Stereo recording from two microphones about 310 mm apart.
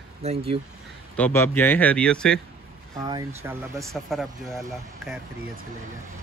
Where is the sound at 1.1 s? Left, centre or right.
Centre.